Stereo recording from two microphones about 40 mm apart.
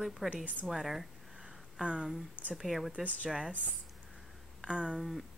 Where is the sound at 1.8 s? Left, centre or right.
Right.